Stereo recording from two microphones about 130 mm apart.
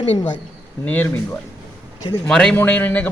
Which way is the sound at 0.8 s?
15° left (ahead or behind).